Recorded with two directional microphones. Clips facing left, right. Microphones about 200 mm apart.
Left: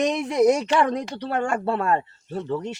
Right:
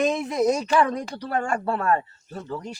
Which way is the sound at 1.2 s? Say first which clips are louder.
Left 1 dB; 30° left (ahead or behind).